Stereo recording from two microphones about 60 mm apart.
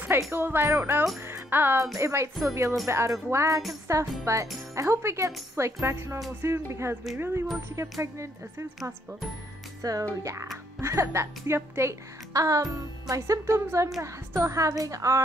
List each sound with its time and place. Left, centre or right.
0.3 s music: right
0.7 s speech: right
1.3 s music: right
2.0 s speech: right
7.2 s music: right
8.0 s speech: right
9.8 s speech: right
10.0 s speech: right
12.4 s speech: right
13.7 s speech: right